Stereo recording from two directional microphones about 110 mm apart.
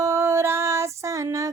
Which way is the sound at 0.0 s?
25° right (ahead or behind).